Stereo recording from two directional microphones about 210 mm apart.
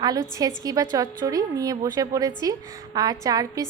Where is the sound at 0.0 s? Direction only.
15° right (ahead or behind).